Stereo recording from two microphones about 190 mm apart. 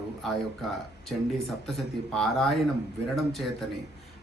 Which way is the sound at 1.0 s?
Centre (ahead or behind).